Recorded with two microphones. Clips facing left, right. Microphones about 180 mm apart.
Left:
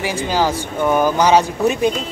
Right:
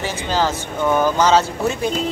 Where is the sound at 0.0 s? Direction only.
10° left (ahead or behind).